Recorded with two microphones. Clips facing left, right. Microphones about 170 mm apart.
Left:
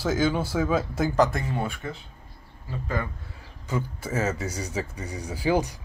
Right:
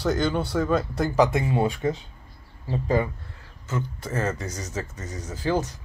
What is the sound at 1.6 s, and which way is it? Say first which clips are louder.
Speech: right 7 dB; 35° right (ahead or behind).